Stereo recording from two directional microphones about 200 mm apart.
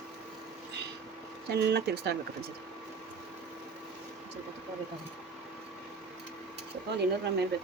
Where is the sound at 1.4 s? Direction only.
55° right (ahead or behind).